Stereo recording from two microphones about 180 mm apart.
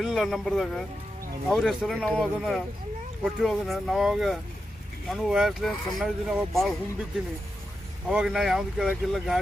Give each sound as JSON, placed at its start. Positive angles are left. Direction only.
{"t": 0.0, "sound": "speech", "side_deg": 0}
{"t": 8.1, "sound": "speech", "side_deg": 0}